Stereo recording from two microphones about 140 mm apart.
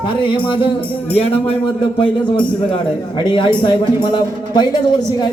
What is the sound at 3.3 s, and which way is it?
Speech, 35° left (ahead or behind).